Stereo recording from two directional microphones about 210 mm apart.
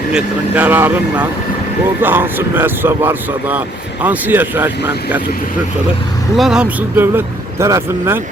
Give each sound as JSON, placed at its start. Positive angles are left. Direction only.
{"t": 0.1, "sound": "speech", "side_deg": -5}
{"t": 6.3, "sound": "speech", "side_deg": 0}